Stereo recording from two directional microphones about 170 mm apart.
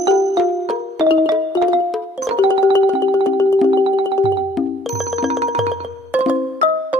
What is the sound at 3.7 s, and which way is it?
Music, 30° right (ahead or behind).